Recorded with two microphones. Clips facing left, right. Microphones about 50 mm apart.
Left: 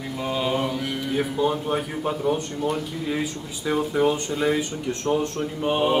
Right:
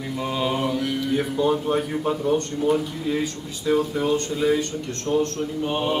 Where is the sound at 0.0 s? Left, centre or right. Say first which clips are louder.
Right 1 dB; centre.